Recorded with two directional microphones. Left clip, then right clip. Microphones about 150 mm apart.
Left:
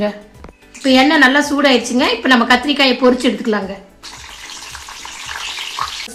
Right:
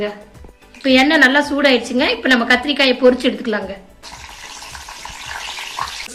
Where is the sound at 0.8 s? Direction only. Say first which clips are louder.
Left 1 dB; 90° left.